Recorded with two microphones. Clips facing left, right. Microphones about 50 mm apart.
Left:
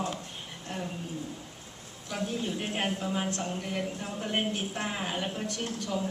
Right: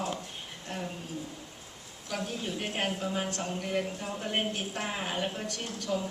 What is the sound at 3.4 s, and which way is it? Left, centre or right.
Speech, centre.